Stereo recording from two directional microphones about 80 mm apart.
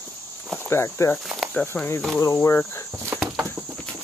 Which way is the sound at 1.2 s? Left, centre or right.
Centre.